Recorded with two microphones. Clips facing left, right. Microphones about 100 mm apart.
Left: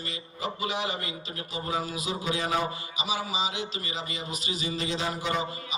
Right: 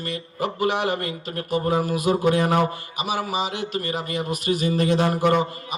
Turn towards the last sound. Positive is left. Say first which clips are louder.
# right 9 dB
turn(degrees=-55)  # may be behind; listen again after turning